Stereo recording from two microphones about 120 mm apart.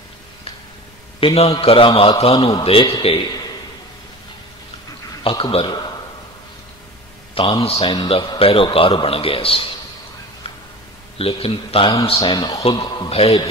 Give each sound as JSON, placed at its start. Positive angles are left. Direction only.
{"t": 1.2, "sound": "a man's voice", "side_deg": 55}
{"t": 5.4, "sound": "a man's voice", "side_deg": 50}
{"t": 7.3, "sound": "a man's voice", "side_deg": 45}
{"t": 7.9, "sound": "a man's voice", "side_deg": 40}
{"t": 11.1, "sound": "a man's voice", "side_deg": 50}
{"t": 12.2, "sound": "speech", "side_deg": 35}
{"t": 13.1, "sound": "a man's voice", "side_deg": 55}